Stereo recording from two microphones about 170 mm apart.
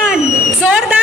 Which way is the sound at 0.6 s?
5° right (ahead or behind).